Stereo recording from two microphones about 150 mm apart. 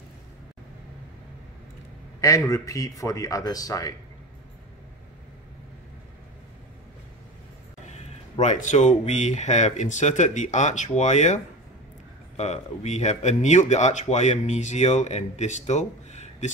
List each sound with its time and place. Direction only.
2.1 s a sound: 20° left (ahead or behind)
2.5 s speech: 25° left (ahead or behind)
8.0 s speech: 55° left (ahead or behind)